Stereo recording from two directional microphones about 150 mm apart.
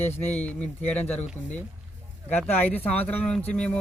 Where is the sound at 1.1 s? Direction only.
50° left (ahead or behind).